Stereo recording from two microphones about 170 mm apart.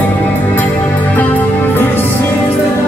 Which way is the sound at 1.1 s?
10° left (ahead or behind).